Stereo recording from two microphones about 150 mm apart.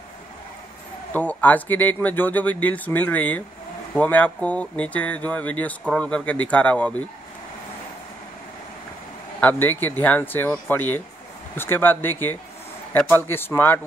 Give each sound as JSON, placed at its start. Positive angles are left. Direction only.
{"t": 1.1, "sound": "speech", "side_deg": 10}
{"t": 9.4, "sound": "speech", "side_deg": 10}